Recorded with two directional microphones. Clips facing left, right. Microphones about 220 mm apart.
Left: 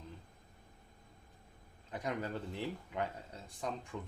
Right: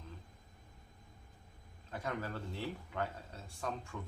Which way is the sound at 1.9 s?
15° left (ahead or behind).